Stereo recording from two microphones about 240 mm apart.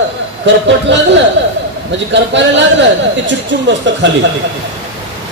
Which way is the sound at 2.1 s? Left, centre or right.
Right.